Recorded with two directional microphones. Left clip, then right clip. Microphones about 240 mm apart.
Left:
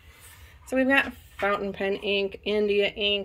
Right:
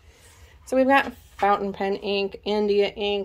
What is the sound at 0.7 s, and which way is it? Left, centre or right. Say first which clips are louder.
A woman's voice: right 4 dB; centre.